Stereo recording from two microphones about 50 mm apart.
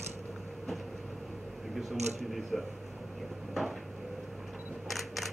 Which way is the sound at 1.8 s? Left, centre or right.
Centre.